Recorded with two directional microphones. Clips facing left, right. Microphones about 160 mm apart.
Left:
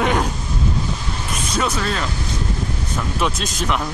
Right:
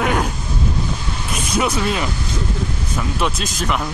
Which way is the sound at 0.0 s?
5° right (ahead or behind).